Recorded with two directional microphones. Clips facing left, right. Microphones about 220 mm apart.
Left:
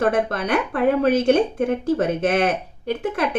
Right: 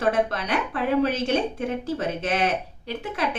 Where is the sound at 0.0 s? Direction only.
50° left (ahead or behind).